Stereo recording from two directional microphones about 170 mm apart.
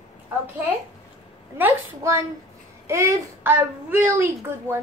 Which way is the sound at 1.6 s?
15° right (ahead or behind).